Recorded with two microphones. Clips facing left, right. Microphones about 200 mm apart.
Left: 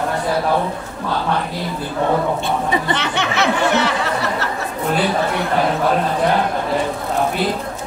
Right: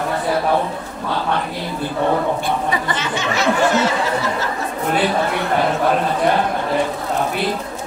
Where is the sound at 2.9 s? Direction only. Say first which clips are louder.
Left 1 dB; 65° left (ahead or behind).